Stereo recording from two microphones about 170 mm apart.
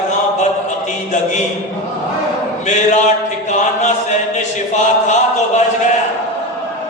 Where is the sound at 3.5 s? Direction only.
45° left (ahead or behind).